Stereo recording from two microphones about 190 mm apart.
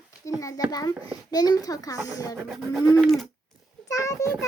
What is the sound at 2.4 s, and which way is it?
Bird, centre (ahead or behind).